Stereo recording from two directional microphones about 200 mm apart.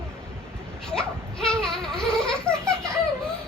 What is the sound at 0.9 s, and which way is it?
Laughter, 5° left (ahead or behind).